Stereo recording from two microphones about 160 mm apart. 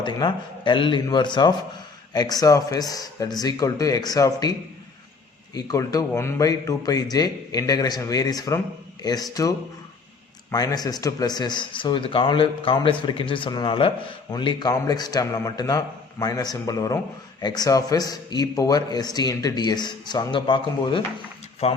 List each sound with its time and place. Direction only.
0.0 s speech: 30° left (ahead or behind)
5.5 s speech: 20° left (ahead or behind)
21.6 s speech: 40° left (ahead or behind)